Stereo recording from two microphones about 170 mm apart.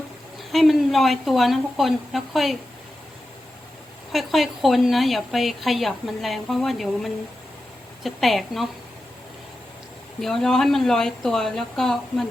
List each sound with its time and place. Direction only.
0.5 s a woman's voice: centre (ahead or behind)
4.1 s a woman's voice: centre (ahead or behind)
10.2 s a woman's voice: centre (ahead or behind)